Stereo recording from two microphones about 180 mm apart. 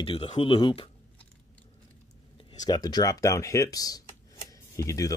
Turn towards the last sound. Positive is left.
turn(degrees=15)  # may be behind; listen again after turning